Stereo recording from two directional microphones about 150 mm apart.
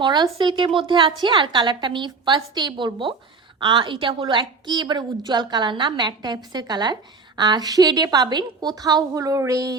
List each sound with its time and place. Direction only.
0.0 s a woman's voice: 30° right (ahead or behind)